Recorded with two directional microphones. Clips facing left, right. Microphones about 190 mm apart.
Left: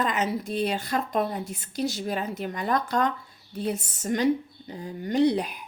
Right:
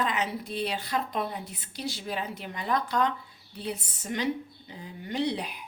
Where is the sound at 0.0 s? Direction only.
45° left (ahead or behind).